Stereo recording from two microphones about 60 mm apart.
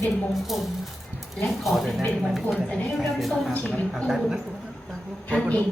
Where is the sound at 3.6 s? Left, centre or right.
Centre.